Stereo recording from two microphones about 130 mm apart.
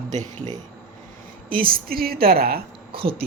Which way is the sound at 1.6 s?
90° right.